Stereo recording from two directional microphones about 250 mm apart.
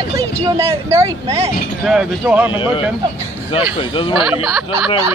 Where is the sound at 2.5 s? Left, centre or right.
Centre.